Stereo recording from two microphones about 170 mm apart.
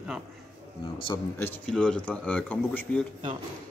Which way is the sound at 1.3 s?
10° left (ahead or behind).